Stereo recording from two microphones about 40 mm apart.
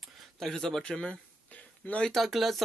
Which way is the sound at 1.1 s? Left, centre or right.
Left.